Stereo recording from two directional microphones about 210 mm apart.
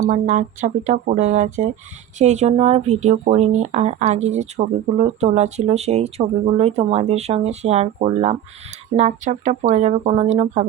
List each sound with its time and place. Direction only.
0.1 s speech: 35° right (ahead or behind)